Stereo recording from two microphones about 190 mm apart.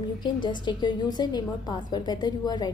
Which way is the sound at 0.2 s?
25° left (ahead or behind).